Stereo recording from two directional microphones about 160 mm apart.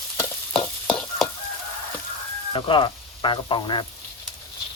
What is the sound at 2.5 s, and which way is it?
Speech, 30° left (ahead or behind).